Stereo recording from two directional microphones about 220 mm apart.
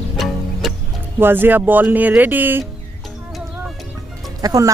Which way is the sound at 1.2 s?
10° right (ahead or behind).